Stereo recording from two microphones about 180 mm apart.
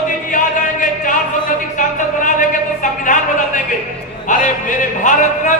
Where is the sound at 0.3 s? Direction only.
45° left (ahead or behind).